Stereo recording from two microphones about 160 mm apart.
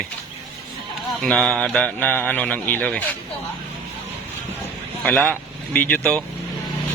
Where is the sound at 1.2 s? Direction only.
5° left (ahead or behind).